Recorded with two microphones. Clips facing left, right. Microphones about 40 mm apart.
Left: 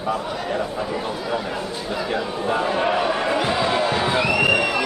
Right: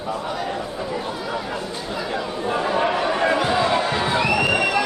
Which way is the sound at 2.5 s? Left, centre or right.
Centre.